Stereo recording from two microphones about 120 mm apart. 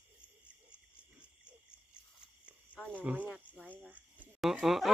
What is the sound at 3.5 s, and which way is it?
Cricket, 15° left (ahead or behind).